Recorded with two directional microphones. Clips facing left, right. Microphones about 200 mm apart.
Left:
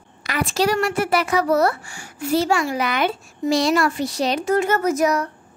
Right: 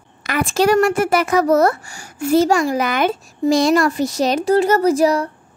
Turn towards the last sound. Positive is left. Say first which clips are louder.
# right 4 dB
turn(degrees=-30)  # may be behind; listen again after turning